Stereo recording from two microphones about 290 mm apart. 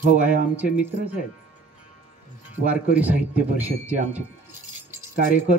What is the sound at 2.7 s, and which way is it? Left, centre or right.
Speech, centre.